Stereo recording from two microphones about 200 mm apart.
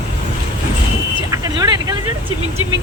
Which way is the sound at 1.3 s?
20° right (ahead or behind).